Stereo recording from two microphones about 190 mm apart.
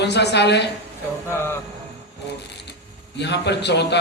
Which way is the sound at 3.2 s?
65° left (ahead or behind).